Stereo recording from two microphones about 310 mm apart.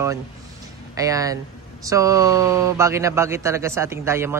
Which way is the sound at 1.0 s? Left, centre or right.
Centre.